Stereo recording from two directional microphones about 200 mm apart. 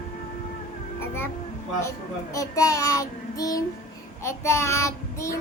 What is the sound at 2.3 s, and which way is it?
A woman's voice, 15° left (ahead or behind).